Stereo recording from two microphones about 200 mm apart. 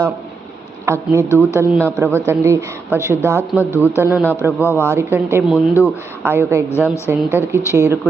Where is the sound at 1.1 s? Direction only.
10° left (ahead or behind).